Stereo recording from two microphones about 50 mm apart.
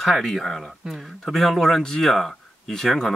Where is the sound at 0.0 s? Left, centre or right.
Centre.